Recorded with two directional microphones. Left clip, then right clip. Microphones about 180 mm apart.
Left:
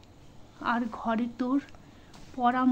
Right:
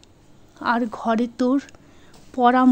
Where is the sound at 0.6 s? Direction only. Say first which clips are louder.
Right 8 dB; 30° right (ahead or behind).